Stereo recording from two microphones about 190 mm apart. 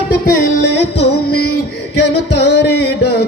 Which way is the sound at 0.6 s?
65° left (ahead or behind).